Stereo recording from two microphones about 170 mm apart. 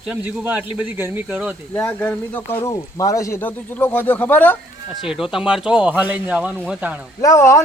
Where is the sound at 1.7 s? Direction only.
10° left (ahead or behind).